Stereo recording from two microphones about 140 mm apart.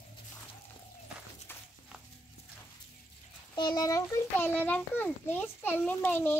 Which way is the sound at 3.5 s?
30° left (ahead or behind).